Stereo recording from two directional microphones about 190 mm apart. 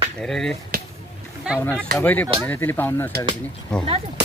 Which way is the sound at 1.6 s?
10° left (ahead or behind).